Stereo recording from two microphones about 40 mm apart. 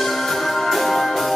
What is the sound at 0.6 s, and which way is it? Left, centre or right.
Music, centre.